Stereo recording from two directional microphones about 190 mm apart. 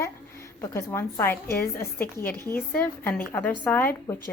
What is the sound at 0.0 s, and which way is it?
A woman's voice, 15° left (ahead or behind).